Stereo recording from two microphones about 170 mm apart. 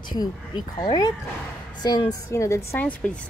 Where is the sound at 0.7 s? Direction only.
25° left (ahead or behind).